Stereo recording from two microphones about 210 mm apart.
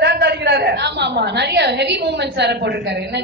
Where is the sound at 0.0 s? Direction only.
50° right (ahead or behind).